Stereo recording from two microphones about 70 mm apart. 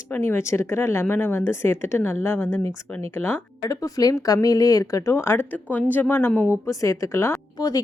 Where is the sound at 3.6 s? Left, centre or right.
Left.